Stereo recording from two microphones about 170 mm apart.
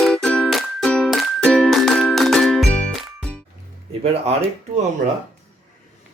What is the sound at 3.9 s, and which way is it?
Speech, 35° right (ahead or behind).